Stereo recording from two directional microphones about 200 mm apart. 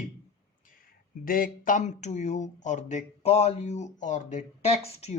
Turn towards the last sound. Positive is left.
turn(degrees=30)  # may be behind; listen again after turning